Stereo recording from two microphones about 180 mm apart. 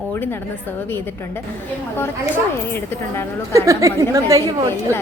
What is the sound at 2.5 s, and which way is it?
Speech, 15° left (ahead or behind).